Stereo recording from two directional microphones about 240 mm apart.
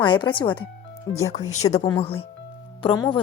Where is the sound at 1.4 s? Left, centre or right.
Left.